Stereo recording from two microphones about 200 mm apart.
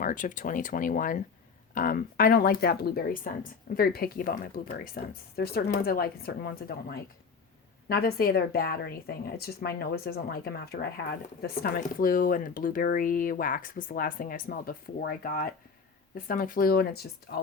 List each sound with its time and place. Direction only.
0.0 s speech: 40° left (ahead or behind)